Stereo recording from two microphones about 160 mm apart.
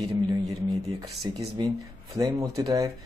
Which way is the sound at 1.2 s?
30° right (ahead or behind).